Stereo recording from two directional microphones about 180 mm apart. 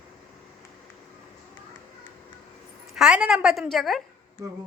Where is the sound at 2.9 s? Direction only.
5° right (ahead or behind).